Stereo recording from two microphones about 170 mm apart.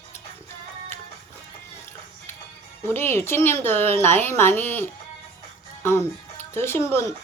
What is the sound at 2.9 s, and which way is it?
Speech, 15° left (ahead or behind).